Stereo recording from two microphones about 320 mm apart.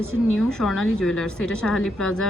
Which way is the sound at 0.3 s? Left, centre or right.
Centre.